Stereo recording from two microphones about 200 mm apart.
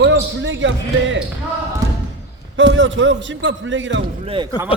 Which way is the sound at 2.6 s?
65° right (ahead or behind).